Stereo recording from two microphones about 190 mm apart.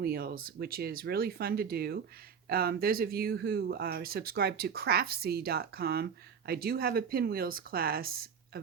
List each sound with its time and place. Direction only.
0.0 s speech: 55° right (ahead or behind)